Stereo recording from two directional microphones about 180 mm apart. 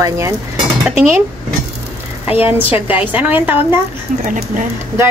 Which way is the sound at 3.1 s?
10° right (ahead or behind).